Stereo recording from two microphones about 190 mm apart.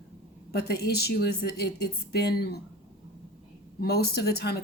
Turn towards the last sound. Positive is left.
turn(degrees=60)  # may be behind; listen again after turning